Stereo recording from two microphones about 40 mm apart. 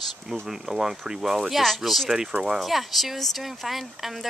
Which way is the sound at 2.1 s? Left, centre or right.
Centre.